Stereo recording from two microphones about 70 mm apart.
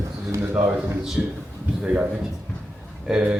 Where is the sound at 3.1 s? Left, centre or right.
Centre.